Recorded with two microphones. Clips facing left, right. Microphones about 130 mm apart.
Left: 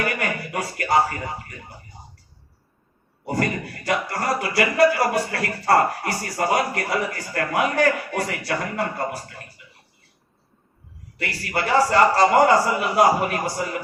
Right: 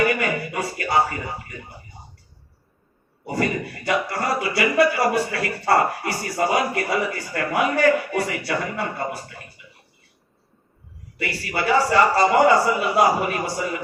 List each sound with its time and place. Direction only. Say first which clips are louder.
0.2 s a sound: right 2 dB; 45° left (ahead or behind)
3.2 s speech: right 1 dB; 45° left (ahead or behind)
11.3 s speech: right 1 dB; 45° left (ahead or behind)